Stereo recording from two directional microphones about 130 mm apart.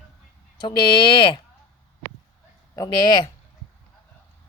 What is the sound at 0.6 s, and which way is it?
Speech, 35° left (ahead or behind).